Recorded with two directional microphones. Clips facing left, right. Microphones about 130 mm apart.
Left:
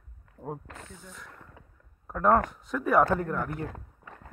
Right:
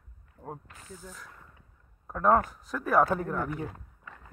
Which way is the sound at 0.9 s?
5° right (ahead or behind).